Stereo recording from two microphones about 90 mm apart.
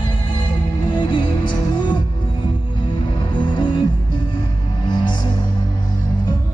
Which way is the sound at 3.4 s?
55° left (ahead or behind).